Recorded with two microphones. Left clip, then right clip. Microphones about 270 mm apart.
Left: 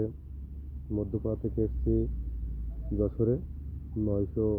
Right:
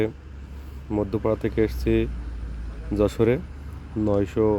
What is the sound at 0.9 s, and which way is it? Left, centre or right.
Speech, right.